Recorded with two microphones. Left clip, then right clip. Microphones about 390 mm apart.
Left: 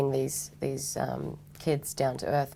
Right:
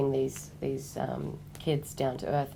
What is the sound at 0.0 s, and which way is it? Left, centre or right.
Speech, left.